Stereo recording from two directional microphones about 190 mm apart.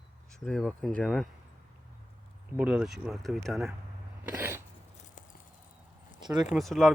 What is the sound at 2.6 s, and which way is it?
Speech, 5° right (ahead or behind).